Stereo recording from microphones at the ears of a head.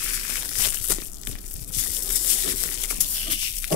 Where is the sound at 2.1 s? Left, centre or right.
Left.